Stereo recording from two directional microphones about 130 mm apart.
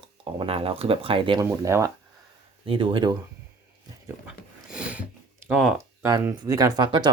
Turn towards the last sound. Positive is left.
turn(degrees=-35)  # may be behind; listen again after turning